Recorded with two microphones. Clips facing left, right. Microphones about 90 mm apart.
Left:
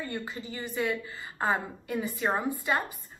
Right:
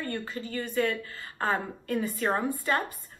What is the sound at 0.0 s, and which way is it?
Speech, 15° left (ahead or behind).